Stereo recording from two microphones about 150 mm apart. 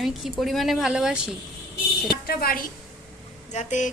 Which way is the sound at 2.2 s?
85° left.